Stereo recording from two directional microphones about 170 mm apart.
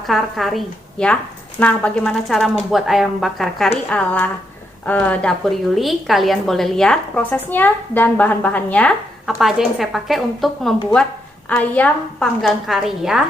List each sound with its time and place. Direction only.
0.1 s a woman's voice: centre (ahead or behind)